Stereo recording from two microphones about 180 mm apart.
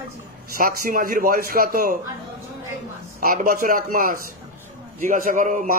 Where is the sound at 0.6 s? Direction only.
50° right (ahead or behind).